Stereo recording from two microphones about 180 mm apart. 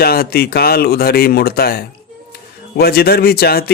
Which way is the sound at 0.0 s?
60° left (ahead or behind).